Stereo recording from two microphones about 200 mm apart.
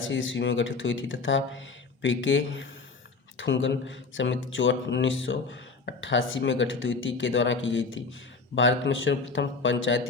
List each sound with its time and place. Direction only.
0.1 s speech: 70° left (ahead or behind)